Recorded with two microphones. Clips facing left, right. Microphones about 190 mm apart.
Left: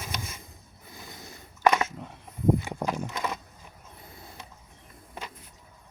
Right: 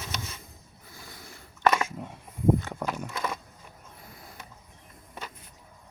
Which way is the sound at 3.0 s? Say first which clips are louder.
Left 1 dB; 20° left (ahead or behind).